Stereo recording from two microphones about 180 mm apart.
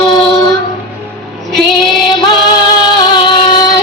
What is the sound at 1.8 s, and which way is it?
Music, 25° left (ahead or behind).